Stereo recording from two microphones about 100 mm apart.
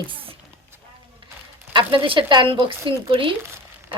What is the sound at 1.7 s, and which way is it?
Speech, 55° right (ahead or behind).